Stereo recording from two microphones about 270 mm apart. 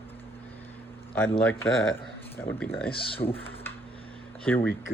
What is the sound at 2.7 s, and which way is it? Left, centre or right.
Speech, left.